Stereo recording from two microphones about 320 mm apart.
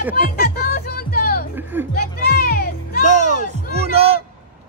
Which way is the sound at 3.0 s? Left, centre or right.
Right.